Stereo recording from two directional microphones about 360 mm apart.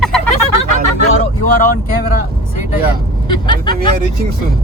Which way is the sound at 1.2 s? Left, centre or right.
Left.